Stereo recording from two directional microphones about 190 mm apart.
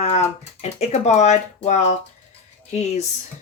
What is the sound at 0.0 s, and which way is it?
Speech, 35° left (ahead or behind).